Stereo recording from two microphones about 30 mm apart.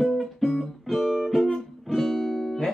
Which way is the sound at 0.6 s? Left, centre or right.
Centre.